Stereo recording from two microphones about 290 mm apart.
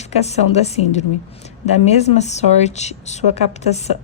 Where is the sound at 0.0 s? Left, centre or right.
Left.